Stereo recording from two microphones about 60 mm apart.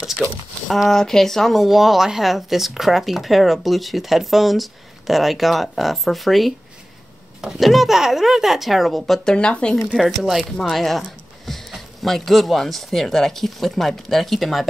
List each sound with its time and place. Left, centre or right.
0.7 s speech: centre
9.3 s speech: centre
9.9 s speech: centre